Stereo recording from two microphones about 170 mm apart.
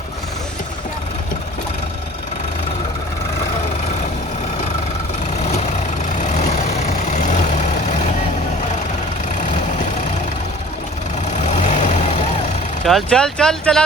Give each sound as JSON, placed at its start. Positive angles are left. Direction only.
{"t": 5.4, "sound": "vehicle", "side_deg": 40}
{"t": 11.3, "sound": "vehicle", "side_deg": 45}
{"t": 12.8, "sound": "speech", "side_deg": 5}